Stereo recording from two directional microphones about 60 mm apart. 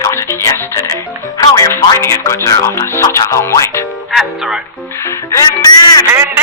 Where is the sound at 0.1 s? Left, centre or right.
Left.